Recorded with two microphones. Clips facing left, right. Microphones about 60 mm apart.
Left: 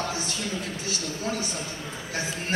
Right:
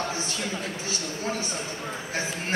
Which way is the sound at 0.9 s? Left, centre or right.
Right.